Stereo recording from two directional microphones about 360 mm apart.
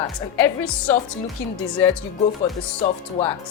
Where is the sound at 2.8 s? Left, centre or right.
Centre.